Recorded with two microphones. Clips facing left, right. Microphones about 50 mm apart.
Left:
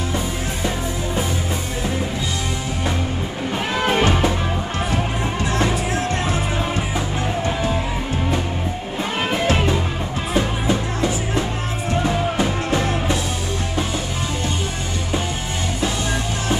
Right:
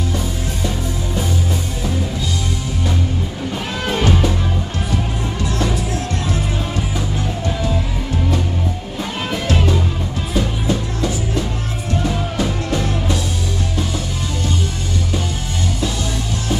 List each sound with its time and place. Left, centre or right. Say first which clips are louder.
3.8 s music: even; left
7.4 s music: right 1 dB; left
9.3 s music: even; left